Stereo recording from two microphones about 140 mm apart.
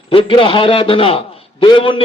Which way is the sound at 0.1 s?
40° left (ahead or behind).